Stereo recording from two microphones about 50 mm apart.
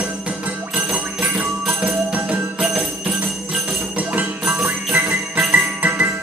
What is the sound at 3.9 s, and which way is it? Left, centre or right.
Music, right.